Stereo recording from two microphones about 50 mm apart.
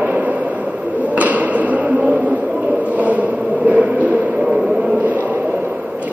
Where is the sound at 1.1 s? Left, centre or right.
Right.